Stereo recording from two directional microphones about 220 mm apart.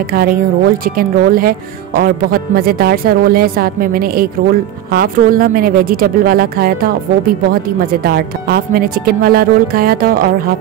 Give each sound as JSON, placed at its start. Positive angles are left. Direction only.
{"t": 0.1, "sound": "a woman's voice", "side_deg": -40}